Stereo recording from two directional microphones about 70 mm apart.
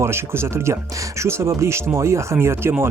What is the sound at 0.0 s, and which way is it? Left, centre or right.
Speech, right.